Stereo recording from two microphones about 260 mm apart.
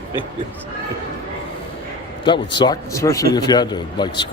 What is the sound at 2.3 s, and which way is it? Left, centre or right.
A man's voice, centre.